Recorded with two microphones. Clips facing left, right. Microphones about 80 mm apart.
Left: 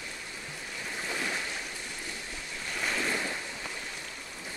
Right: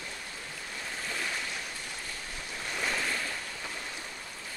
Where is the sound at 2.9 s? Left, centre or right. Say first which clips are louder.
Left 2 dB; centre.